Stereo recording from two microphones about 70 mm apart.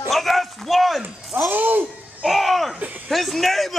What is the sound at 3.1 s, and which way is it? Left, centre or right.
Speech, centre.